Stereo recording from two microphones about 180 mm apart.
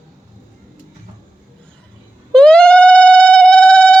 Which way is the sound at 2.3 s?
5° left (ahead or behind).